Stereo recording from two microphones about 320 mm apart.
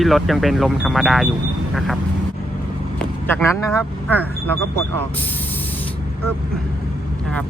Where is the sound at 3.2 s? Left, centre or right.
Centre.